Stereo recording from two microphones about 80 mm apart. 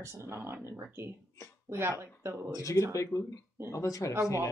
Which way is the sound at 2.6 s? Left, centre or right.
Left.